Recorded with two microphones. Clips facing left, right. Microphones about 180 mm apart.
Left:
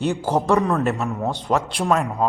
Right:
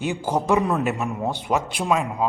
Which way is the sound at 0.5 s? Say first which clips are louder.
Even; 15° right (ahead or behind).